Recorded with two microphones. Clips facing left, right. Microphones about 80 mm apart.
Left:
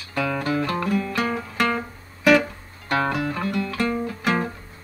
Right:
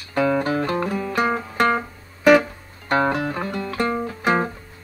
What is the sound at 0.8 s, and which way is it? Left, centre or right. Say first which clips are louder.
Music: right 2 dB; right.